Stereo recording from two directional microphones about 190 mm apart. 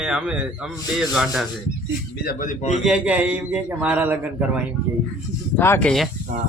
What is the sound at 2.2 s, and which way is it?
Speech, 45° left (ahead or behind).